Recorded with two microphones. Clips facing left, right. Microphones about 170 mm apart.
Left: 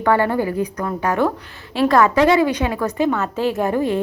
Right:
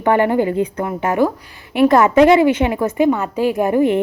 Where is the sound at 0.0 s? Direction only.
20° right (ahead or behind).